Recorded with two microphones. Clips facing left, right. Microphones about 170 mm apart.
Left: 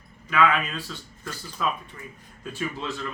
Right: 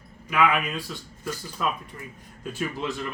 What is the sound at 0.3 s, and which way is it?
Speech, 10° right (ahead or behind).